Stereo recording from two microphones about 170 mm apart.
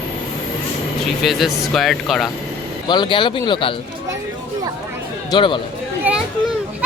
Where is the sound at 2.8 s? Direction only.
25° left (ahead or behind).